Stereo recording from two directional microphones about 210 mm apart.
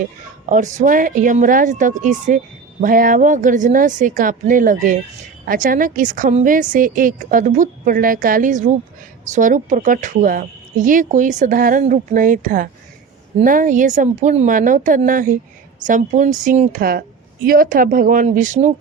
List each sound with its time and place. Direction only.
0.4 s speech: 35° right (ahead or behind)